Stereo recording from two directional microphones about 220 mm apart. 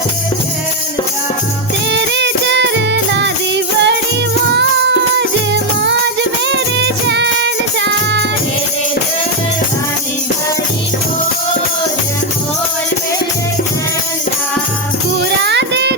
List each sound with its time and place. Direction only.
1.9 s music: 50° right (ahead or behind)
6.5 s music: 50° right (ahead or behind)
15.4 s music: 50° right (ahead or behind)